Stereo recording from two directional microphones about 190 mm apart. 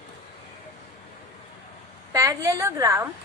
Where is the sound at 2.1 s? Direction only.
15° right (ahead or behind).